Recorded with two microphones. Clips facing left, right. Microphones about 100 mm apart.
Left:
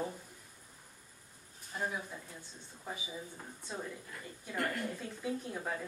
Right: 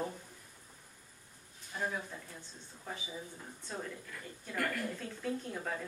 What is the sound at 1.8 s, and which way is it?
A woman's voice, 10° left (ahead or behind).